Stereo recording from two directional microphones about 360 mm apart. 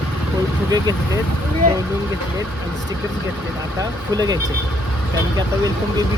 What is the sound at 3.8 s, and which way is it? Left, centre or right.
Speech, centre.